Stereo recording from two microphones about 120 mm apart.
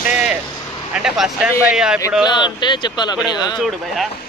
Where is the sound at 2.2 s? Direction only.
40° left (ahead or behind).